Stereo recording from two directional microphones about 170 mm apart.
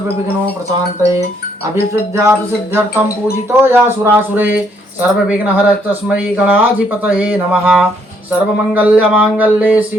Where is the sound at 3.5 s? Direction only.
15° right (ahead or behind).